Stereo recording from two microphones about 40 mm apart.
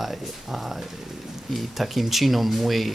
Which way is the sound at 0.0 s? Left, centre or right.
Centre.